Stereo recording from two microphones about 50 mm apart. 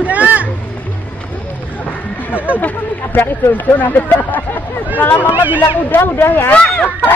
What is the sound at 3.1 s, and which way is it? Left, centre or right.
Speech, left.